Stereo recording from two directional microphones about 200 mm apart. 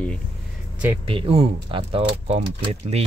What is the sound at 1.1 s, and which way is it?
Speech, 30° right (ahead or behind).